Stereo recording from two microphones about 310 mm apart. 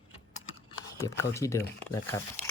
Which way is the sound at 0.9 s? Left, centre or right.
Centre.